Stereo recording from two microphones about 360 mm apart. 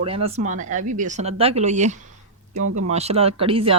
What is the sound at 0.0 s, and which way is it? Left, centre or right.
Speech, centre.